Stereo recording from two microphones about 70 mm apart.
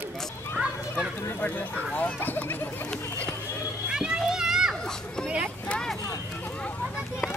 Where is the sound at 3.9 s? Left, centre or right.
Centre.